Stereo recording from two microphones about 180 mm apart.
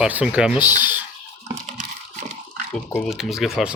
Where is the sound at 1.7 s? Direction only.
45° right (ahead or behind).